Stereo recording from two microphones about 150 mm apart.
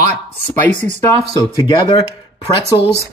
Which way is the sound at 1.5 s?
30° left (ahead or behind).